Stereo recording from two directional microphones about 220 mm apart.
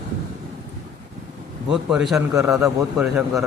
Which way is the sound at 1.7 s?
5° right (ahead or behind).